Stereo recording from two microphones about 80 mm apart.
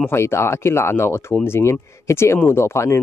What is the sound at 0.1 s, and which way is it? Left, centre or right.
Speech, left.